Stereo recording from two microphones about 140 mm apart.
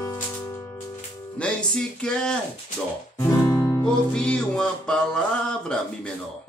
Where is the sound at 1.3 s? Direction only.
5° left (ahead or behind).